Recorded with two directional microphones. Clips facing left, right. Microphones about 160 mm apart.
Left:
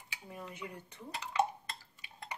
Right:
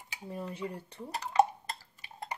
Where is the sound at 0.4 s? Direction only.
30° right (ahead or behind).